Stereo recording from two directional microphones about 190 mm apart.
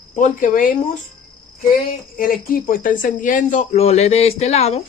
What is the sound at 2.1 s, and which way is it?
Speech, 45° left (ahead or behind).